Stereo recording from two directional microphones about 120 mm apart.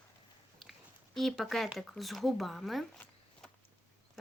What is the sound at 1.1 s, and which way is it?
Speech, centre (ahead or behind).